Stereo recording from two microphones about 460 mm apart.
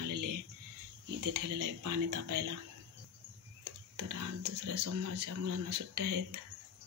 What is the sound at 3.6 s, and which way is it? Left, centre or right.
Speech, right.